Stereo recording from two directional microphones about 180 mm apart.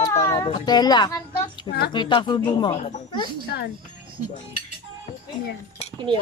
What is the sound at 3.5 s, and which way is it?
Speech, 75° left (ahead or behind).